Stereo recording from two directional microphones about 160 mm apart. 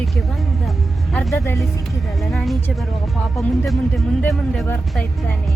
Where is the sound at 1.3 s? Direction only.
20° left (ahead or behind).